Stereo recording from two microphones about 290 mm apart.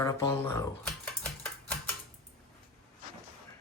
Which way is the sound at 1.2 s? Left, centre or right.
Centre.